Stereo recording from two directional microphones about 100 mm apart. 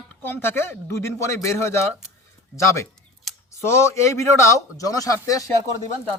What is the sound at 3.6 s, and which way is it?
A man's voice, 25° left (ahead or behind).